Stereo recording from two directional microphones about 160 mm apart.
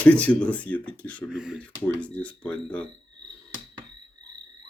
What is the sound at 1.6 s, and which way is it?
Speech, 10° left (ahead or behind).